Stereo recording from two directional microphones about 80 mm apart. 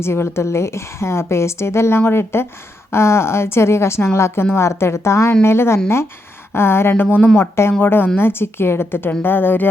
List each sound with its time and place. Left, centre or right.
0.0 s a woman's voice: left